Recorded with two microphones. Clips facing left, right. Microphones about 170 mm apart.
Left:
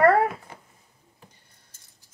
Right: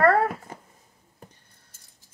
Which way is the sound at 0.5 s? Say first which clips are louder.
Right 4 dB; 45° right (ahead or behind).